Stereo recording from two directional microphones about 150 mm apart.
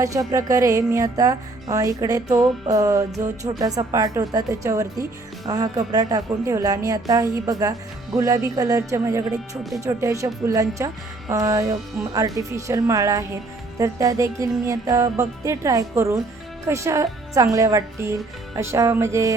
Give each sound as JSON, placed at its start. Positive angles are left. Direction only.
{"t": 0.0, "sound": "speech", "side_deg": -25}